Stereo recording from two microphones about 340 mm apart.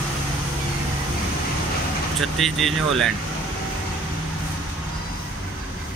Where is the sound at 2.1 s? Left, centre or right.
Centre.